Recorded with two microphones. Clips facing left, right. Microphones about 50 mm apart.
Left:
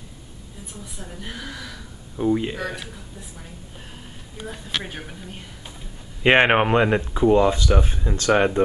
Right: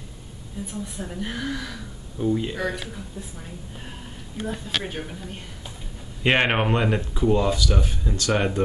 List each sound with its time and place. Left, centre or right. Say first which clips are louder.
0.6 s a woman's voice: right 7 dB; centre
2.1 s speech: left 3 dB; left
2.5 s a woman's voice: right 2 dB; centre
4.5 s a woman's voice: right 1 dB; centre
6.2 s speech: left 4 dB; centre